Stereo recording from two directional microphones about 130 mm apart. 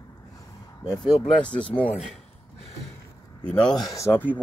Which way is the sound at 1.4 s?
10° left (ahead or behind).